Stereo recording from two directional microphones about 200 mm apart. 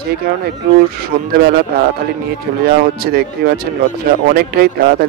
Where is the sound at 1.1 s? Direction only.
55° right (ahead or behind).